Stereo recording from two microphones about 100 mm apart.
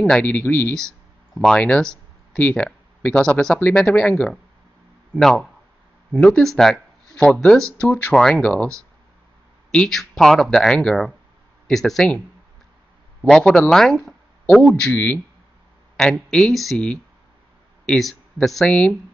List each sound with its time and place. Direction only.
0.0 s speech: 10° left (ahead or behind)
0.7 s speech: 5° left (ahead or behind)
7.8 s speech: 15° left (ahead or behind)
13.2 s speech: 10° left (ahead or behind)